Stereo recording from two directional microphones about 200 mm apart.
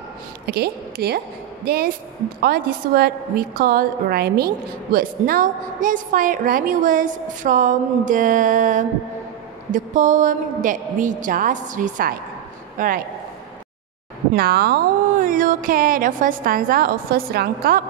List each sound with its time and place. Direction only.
0.5 s a woman's voice: 50° right (ahead or behind)
14.3 s speech: 50° right (ahead or behind)